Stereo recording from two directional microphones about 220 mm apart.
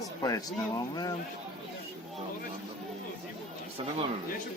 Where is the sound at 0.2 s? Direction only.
15° left (ahead or behind).